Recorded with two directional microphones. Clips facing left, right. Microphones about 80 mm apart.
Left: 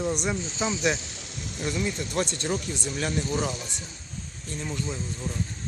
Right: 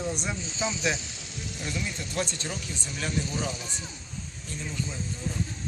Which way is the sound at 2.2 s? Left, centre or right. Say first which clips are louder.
Left 3 dB; left.